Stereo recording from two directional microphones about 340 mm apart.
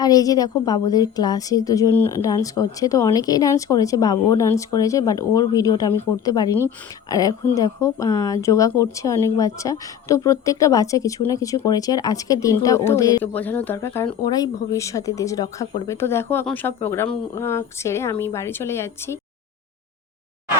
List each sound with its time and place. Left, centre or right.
0.0 s a woman's voice: centre